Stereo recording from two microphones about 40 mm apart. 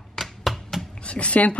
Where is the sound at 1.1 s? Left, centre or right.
Left.